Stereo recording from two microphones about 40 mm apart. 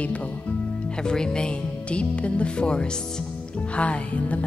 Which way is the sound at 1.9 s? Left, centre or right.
Left.